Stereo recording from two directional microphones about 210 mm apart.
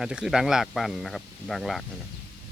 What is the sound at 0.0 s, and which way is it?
Speech, 5° right (ahead or behind).